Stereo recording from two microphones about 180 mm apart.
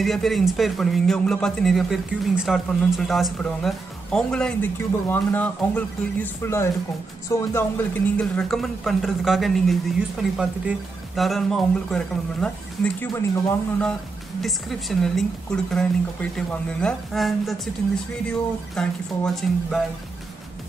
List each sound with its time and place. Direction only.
0.0 s speech: centre (ahead or behind)
13.1 s speech: 15° left (ahead or behind)
14.4 s speech: centre (ahead or behind)
18.8 s speech: centre (ahead or behind)